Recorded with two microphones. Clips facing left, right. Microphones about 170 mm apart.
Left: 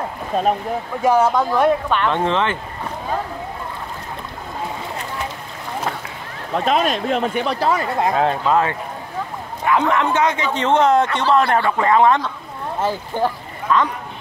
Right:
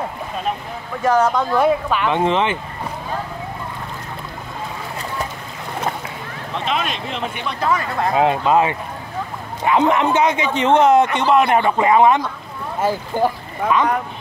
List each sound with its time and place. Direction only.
1.0 s speech: 5° left (ahead or behind)
1.6 s a man's voice: 5° right (ahead or behind)
6.5 s speech: 40° left (ahead or behind)
8.2 s a man's voice: 15° right (ahead or behind)